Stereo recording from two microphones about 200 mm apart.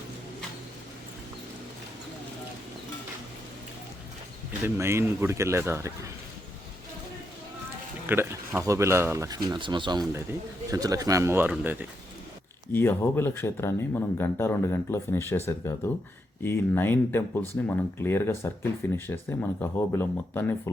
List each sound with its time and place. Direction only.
4.6 s speech: 15° right (ahead or behind)
8.0 s speech: 10° right (ahead or behind)
12.7 s speech: 10° left (ahead or behind)